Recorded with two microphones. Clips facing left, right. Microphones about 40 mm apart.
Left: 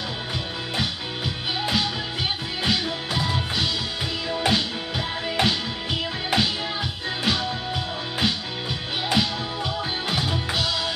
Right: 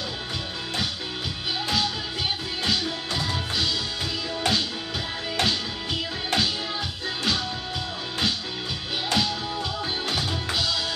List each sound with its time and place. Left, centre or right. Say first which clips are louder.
2.6 s music: left 2 dB; centre